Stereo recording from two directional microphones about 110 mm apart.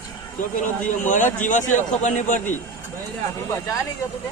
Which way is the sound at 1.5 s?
90° left.